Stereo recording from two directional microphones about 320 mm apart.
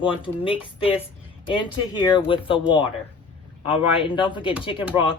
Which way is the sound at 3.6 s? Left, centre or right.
Centre.